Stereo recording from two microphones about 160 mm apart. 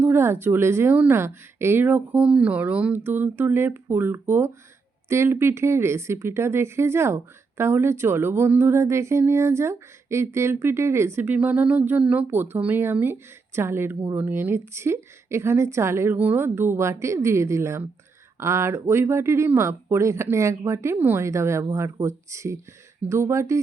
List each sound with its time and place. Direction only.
0.0 s speech: 15° right (ahead or behind)